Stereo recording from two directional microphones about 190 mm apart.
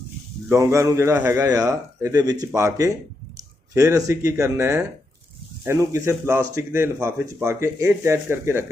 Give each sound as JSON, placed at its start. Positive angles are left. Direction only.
{"t": 0.4, "sound": "speech", "side_deg": -15}